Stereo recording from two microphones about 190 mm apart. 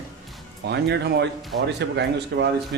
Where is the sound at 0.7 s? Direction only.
60° right (ahead or behind).